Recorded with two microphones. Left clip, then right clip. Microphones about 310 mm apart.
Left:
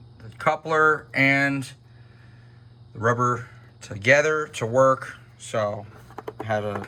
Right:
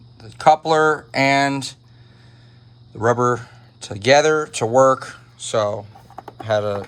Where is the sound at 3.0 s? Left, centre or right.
Centre.